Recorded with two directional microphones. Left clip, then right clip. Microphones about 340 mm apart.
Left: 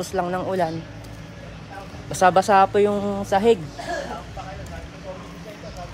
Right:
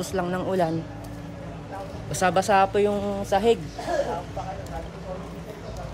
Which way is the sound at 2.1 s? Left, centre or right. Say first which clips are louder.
Left 5 dB; centre.